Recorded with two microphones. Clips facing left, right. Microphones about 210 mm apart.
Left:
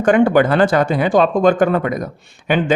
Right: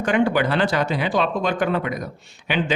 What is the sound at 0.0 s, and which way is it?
Speech, 50° left (ahead or behind).